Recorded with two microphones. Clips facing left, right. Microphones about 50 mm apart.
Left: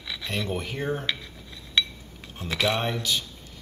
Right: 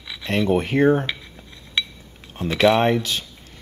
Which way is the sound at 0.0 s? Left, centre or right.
Centre.